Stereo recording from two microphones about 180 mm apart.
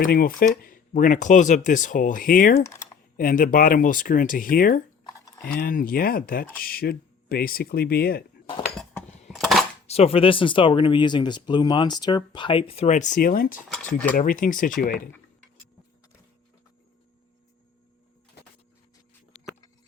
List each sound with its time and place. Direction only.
0.0 s speech: 55° left (ahead or behind)
8.7 s a sound: 5° left (ahead or behind)
9.8 s speech: 35° left (ahead or behind); by 13.6 s 55° left (ahead or behind)
13.7 s cutlery: 5° left (ahead or behind)
14.2 s speech: 50° left (ahead or behind)